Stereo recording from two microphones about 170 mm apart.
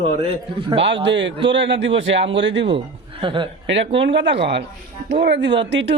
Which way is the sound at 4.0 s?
90° right.